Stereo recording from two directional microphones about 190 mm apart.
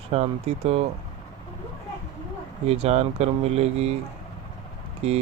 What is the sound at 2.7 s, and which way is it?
Speech, 35° right (ahead or behind).